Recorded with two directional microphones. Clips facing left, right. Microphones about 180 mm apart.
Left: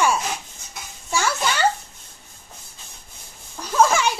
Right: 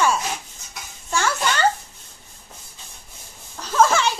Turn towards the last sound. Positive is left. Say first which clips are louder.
# even
turn(degrees=10)  # may be behind; listen again after turning